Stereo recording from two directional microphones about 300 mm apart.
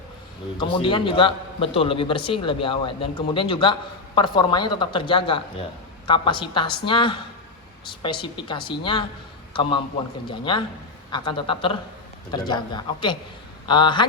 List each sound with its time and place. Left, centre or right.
0.6 s a man's voice: centre